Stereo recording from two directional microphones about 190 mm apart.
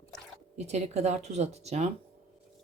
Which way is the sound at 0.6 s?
35° right (ahead or behind).